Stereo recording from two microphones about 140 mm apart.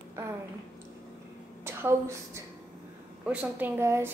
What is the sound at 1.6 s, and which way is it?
Speech, 20° right (ahead or behind).